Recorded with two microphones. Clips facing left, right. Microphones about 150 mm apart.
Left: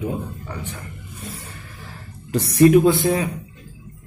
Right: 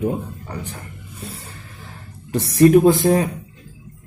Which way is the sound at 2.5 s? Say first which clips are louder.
Right 1 dB; 40° right (ahead or behind).